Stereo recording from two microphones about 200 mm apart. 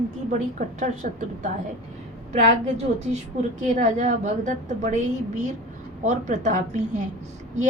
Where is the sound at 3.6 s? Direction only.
35° right (ahead or behind).